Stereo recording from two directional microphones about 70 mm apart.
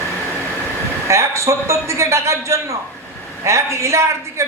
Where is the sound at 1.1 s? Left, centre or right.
Right.